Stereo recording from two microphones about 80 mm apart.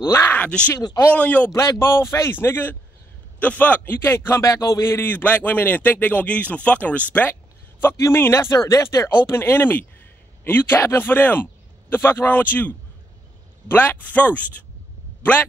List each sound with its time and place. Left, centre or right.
0.0 s speech: left
0.4 s a man's voice: centre
1.5 s speech: left
2.3 s speech: left
4.5 s speech: left
8.0 s speech: left